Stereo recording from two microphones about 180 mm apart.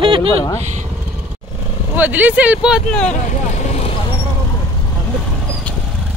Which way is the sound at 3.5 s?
40° left (ahead or behind).